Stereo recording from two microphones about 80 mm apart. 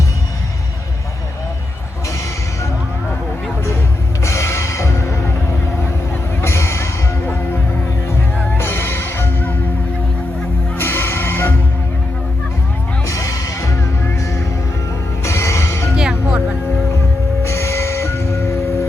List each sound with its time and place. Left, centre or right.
4.2 s music: left
8.5 s music: left
10.8 s music: left
13.1 s music: left
15.2 s music: left
16.0 s music: centre
17.4 s music: left